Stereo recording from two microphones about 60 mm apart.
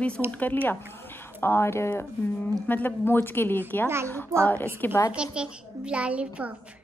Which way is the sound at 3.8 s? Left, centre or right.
Right.